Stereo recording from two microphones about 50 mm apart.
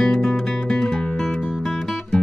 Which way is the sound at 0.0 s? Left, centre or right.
Centre.